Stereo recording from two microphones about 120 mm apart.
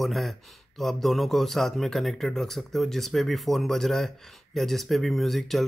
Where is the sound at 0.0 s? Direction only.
Centre (ahead or behind).